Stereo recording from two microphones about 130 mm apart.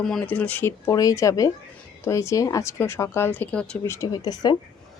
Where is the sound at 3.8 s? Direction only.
25° left (ahead or behind).